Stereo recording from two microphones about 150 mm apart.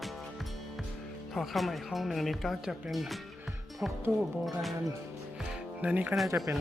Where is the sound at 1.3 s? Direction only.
Centre (ahead or behind).